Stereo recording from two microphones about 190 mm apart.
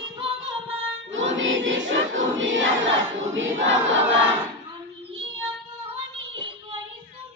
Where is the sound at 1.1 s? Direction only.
85° right.